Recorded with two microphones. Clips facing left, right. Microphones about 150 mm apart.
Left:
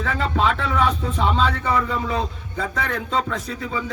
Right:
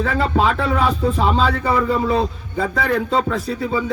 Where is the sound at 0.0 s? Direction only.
40° right (ahead or behind).